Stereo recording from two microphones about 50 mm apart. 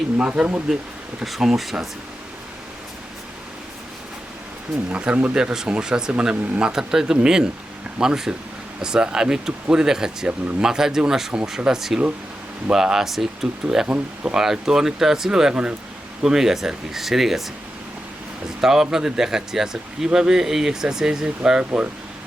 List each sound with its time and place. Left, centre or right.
0.3 s speech: right
1.2 s speech: centre
4.9 s speech: right; by 13.5 s centre
13.8 s speech: right
14.3 s speech: centre
18.6 s speech: centre
21.6 s speech: right